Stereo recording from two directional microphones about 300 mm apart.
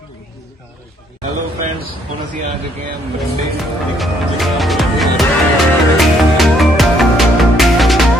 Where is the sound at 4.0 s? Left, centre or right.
Centre.